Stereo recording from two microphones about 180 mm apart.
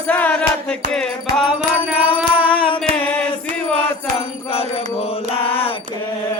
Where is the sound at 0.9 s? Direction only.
5° left (ahead or behind).